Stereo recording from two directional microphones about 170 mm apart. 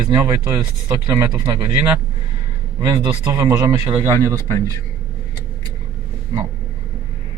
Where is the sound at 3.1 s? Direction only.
15° right (ahead or behind).